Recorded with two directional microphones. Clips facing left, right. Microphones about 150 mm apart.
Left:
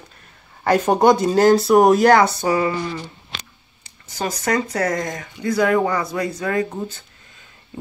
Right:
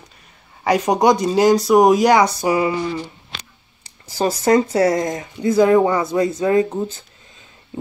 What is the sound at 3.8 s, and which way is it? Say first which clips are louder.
Speech: right 6 dB; 30° right (ahead or behind).